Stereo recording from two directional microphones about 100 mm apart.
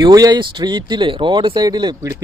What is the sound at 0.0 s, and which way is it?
Speech, 40° right (ahead or behind).